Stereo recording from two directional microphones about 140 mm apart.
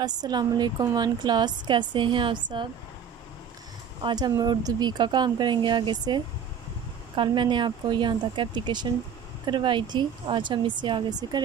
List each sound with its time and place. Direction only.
0.0 s a woman's voice: 30° right (ahead or behind)
4.0 s a woman's voice: 30° right (ahead or behind)